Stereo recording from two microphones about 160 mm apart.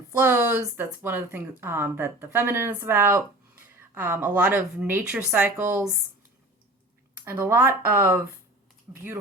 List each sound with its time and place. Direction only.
0.1 s speech: 15° right (ahead or behind)
7.3 s speech: 10° right (ahead or behind)
7.7 s speech: 65° right (ahead or behind)
7.9 s speech: 15° right (ahead or behind)